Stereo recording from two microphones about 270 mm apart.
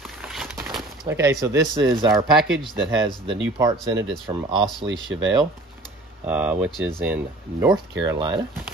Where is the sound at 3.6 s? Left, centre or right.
Centre.